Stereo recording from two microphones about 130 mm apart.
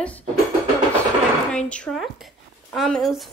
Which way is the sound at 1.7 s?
10° left (ahead or behind).